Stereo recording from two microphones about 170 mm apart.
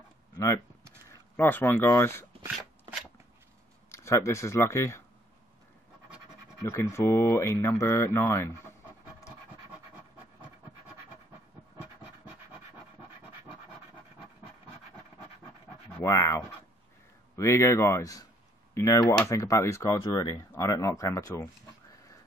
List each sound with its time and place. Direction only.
1.3 s speech: 10° left (ahead or behind)
3.9 s speech: 15° left (ahead or behind)
6.6 s speech: 15° left (ahead or behind)
9.7 s a sound: 10° right (ahead or behind)
16.0 s a sound: 20° left (ahead or behind)
17.4 s speech: 15° left (ahead or behind)